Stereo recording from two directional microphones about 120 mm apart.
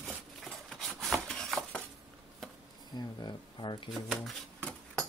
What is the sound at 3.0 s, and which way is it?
Speech, 35° left (ahead or behind).